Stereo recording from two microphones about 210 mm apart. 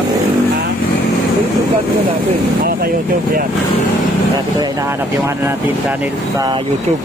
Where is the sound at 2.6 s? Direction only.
45° right (ahead or behind).